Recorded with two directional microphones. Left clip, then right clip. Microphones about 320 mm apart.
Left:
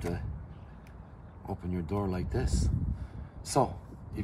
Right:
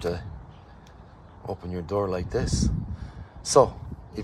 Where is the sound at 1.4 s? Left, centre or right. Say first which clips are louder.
Right 6 dB; centre.